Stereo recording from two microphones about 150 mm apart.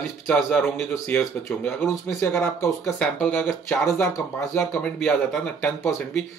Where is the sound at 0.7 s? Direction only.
10° left (ahead or behind).